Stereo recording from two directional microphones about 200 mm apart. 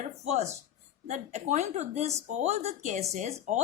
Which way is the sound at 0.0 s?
35° right (ahead or behind).